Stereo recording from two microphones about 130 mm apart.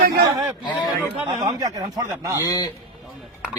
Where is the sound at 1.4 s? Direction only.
30° right (ahead or behind).